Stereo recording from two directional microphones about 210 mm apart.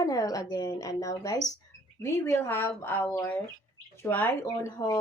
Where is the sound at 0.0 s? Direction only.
15° left (ahead or behind).